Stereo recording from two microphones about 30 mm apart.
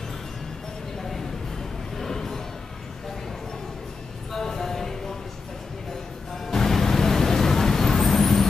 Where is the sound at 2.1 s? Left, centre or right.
Centre.